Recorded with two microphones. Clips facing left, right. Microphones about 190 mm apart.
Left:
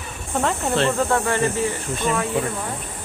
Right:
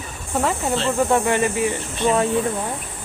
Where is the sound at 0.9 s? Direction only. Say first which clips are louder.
Right 2 dB; 15° right (ahead or behind).